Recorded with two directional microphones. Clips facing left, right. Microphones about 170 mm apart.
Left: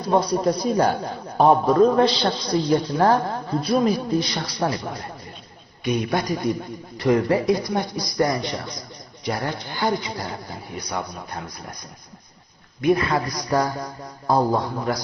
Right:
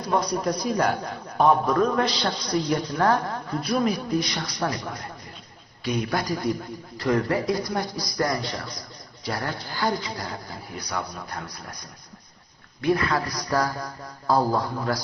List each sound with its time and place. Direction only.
0.1 s a man's voice: 30° left (ahead or behind)
12.8 s a man's voice: 20° left (ahead or behind)